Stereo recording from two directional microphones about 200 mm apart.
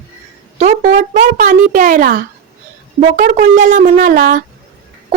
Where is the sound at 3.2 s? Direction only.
40° right (ahead or behind).